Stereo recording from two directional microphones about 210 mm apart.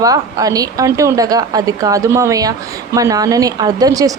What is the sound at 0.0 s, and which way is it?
A woman's voice, 15° right (ahead or behind).